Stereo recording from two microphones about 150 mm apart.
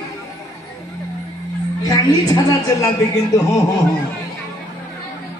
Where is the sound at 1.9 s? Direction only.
25° left (ahead or behind).